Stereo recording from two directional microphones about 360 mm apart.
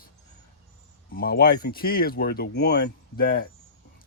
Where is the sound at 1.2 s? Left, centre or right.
Left.